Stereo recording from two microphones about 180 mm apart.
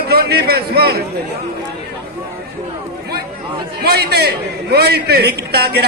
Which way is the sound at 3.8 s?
65° right (ahead or behind).